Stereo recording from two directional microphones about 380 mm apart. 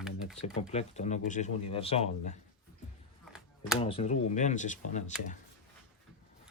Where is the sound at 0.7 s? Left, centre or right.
Centre.